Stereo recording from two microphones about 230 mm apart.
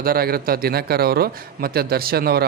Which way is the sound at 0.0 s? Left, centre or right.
Right.